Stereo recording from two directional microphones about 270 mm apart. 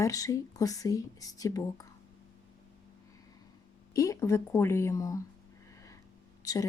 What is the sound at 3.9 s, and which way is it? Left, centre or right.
Speech, centre.